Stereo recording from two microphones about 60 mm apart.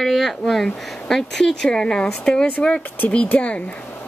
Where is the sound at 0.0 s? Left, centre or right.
Centre.